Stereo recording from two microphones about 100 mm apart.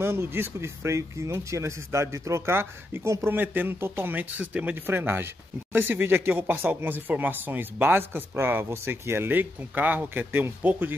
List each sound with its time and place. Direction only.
0.0 s speech: 25° right (ahead or behind)